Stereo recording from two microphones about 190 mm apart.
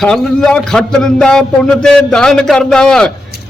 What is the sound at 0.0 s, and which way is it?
A man's voice, 5° left (ahead or behind).